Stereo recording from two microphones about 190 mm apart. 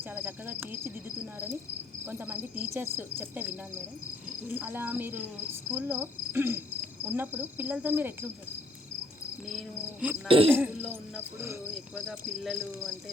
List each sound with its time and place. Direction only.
0.1 s cricket: 10° right (ahead or behind)
2.0 s cricket: 10° right (ahead or behind)
9.5 s speech: 5° right (ahead or behind)
10.2 s speech: 30° right (ahead or behind)
11.7 s speech: centre (ahead or behind)